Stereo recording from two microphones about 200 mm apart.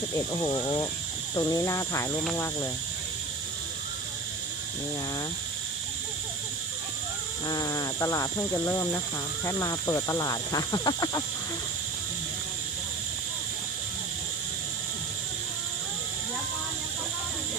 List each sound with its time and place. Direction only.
0.4 s speech: 20° left (ahead or behind)
7.4 s speech: 20° left (ahead or behind)